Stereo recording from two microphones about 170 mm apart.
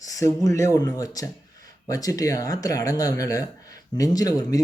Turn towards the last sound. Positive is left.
turn(degrees=20)  # may be behind; listen again after turning